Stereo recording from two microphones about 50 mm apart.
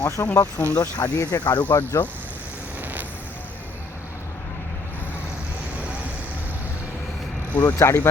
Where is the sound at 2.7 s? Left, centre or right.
Right.